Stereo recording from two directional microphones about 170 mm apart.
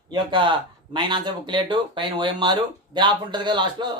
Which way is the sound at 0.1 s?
30° right (ahead or behind).